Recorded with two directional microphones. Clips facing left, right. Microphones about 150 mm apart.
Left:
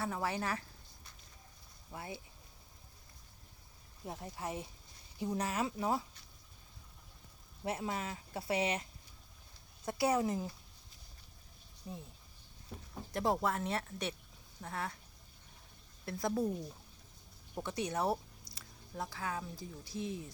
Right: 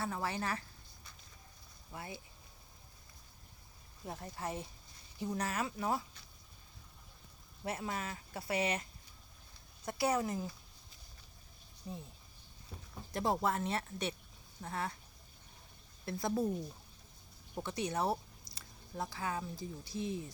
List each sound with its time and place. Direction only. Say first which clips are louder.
0.0 s speech: left 1 dB; 5° left (ahead or behind)
1.9 s speech: left 1 dB; 20° left (ahead or behind)
4.0 s speech: even; 10° left (ahead or behind)
7.6 s speech: left 1 dB; 15° left (ahead or behind)
11.9 s speech: right 1 dB; 5° left (ahead or behind)
13.1 s speech: even; centre (ahead or behind)
16.0 s speech: even; centre (ahead or behind)
17.5 s speech: even; centre (ahead or behind)